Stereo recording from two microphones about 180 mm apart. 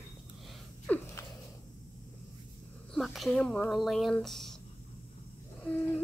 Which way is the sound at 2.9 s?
Centre (ahead or behind).